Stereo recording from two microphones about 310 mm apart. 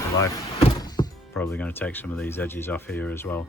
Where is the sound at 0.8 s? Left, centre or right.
Centre.